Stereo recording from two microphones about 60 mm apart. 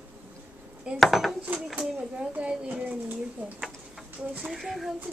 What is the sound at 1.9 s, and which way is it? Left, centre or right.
Speech, centre.